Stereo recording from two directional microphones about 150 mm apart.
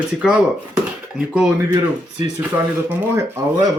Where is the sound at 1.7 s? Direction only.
25° right (ahead or behind).